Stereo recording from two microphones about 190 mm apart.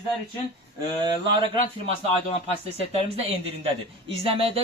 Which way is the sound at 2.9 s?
30° right (ahead or behind).